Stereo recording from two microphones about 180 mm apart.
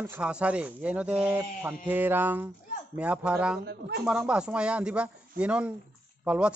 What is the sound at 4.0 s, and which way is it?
Speech, 5° right (ahead or behind).